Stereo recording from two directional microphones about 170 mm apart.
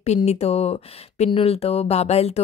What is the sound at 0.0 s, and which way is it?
Speech, 40° left (ahead or behind).